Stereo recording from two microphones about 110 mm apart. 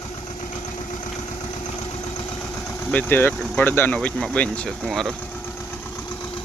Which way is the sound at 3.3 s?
5° left (ahead or behind).